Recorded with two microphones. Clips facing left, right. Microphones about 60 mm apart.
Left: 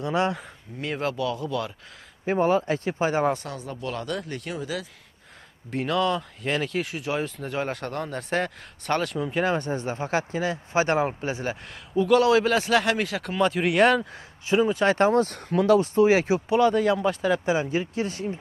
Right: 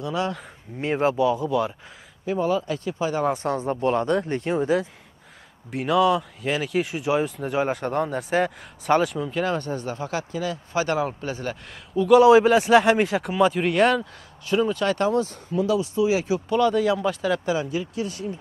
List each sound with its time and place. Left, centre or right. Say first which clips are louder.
0.0 s speech: left 2 dB; left
0.7 s a man's voice: right 6 dB; right
2.2 s speech: left 2 dB; left
3.4 s speech: right 10 dB; right
5.7 s speech: right 4 dB; centre
9.2 s speech: even; centre
11.9 s a man's voice: right 3 dB; centre
12.2 s a man's voice: right 6 dB; centre
13.2 s speech: right 3 dB; centre
14.5 s speech: even; left
14.8 s speech: left 2 dB; left
15.2 s speech: left 3 dB; left
16.4 s speech: right 1 dB; centre
17.5 s speech: left 1 dB; left